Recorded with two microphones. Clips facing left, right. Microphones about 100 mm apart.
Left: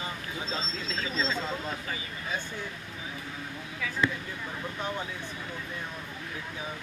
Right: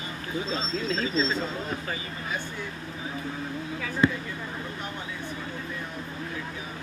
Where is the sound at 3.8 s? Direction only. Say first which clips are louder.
Right 5 dB; 35° right (ahead or behind).